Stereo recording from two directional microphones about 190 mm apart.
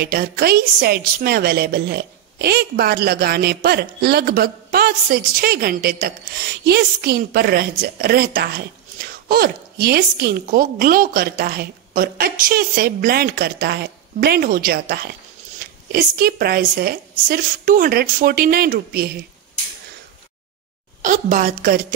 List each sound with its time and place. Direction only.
0.0 s a woman's voice: 55° right (ahead or behind)
21.0 s a woman's voice: 45° right (ahead or behind)